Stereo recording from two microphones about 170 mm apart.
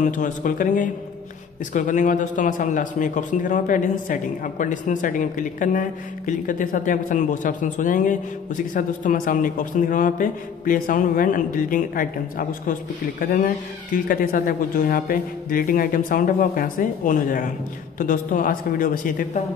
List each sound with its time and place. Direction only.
0.0 s a woman's voice: 50° left (ahead or behind)